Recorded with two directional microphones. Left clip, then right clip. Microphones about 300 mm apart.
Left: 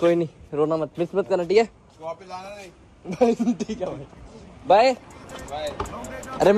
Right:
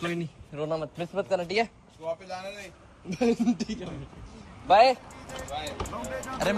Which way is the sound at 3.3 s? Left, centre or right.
Centre.